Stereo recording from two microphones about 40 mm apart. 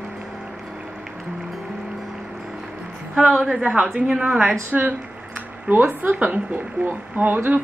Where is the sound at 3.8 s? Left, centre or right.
Centre.